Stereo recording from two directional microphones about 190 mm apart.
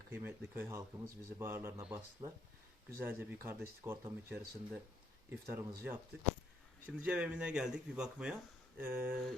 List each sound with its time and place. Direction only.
0.1 s speech: 10° right (ahead or behind)
2.2 s speech: 20° right (ahead or behind)
3.0 s speech: 10° right (ahead or behind)